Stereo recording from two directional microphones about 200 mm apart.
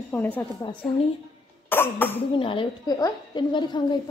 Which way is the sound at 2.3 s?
25° left (ahead or behind).